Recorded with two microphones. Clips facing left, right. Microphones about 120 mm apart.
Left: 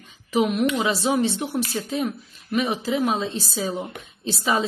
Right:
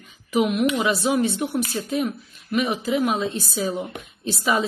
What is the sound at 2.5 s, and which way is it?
A woman's voice, 30° left (ahead or behind).